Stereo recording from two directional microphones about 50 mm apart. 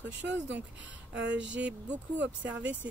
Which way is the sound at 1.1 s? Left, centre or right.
Right.